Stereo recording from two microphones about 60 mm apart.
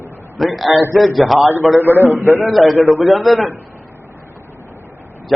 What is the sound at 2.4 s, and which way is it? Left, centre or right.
A man's voice, centre.